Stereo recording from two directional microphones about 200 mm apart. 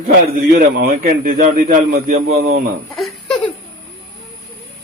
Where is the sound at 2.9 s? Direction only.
Centre (ahead or behind).